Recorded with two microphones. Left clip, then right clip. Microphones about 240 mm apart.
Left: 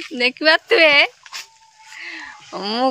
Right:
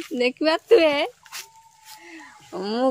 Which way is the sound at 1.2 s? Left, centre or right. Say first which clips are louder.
Left 5 dB; centre.